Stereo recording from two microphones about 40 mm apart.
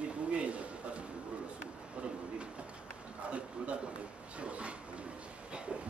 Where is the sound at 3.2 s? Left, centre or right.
Right.